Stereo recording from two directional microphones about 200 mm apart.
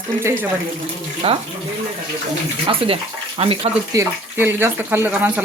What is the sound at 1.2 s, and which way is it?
Speech, 30° right (ahead or behind).